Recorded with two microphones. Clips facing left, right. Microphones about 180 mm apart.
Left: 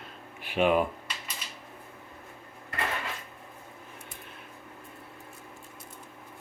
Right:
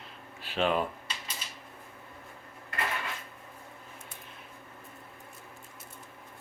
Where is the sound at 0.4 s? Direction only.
15° left (ahead or behind).